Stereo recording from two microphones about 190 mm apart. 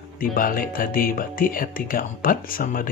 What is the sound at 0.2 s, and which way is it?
Speech, 50° left (ahead or behind).